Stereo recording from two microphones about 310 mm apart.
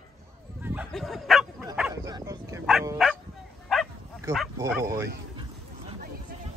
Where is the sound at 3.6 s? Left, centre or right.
Centre.